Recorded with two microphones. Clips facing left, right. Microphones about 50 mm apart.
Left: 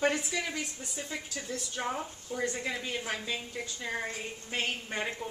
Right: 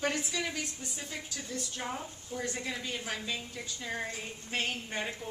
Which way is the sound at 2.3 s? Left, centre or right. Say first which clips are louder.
Left 3 dB; left.